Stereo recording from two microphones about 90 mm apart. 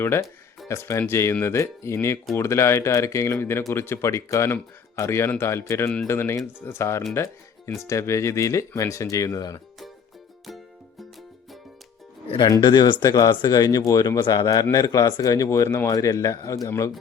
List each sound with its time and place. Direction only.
0.0 s speech: 30° left (ahead or behind)
12.5 s speech: 55° left (ahead or behind)
13.1 s speech: 40° left (ahead or behind)